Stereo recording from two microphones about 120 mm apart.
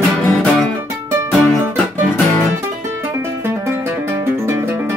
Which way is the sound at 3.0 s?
20° right (ahead or behind).